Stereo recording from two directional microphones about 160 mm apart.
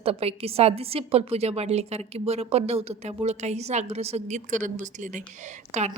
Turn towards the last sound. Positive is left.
turn(degrees=-45)  # may be behind; listen again after turning